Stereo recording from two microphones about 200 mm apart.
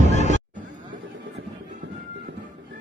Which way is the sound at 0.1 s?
35° left (ahead or behind).